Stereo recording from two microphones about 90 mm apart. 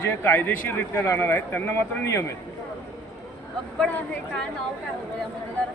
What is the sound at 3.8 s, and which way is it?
Speech, 10° left (ahead or behind).